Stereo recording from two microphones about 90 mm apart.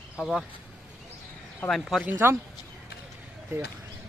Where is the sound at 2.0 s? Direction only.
25° right (ahead or behind).